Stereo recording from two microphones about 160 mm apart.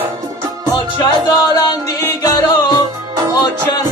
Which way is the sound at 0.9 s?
25° left (ahead or behind).